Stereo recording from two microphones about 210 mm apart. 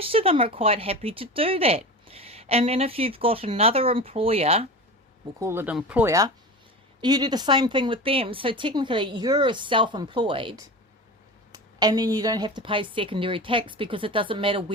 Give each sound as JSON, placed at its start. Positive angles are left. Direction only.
{"t": 0.0, "sound": "speech", "side_deg": -25}
{"t": 5.4, "sound": "speech", "side_deg": -10}
{"t": 11.5, "sound": "speech", "side_deg": -20}